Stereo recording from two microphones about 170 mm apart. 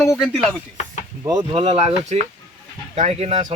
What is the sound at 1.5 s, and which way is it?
Speech, 35° right (ahead or behind).